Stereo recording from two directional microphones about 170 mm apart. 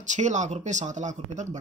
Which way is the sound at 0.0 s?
45° right (ahead or behind).